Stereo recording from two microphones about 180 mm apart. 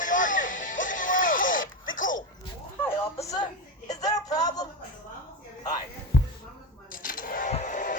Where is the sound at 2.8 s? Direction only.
15° left (ahead or behind).